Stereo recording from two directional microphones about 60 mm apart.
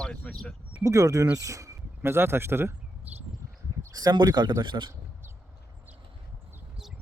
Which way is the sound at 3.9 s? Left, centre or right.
Right.